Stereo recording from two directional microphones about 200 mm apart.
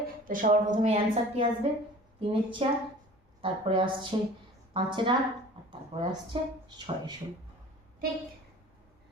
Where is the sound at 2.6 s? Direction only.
30° right (ahead or behind).